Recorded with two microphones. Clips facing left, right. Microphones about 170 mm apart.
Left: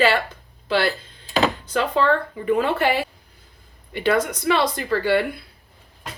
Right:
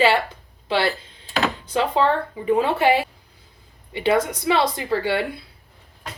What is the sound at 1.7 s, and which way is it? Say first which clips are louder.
A woman's voice: right 2 dB; 20° right (ahead or behind).